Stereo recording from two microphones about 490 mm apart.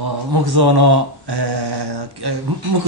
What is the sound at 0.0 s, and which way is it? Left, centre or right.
Mantra, right.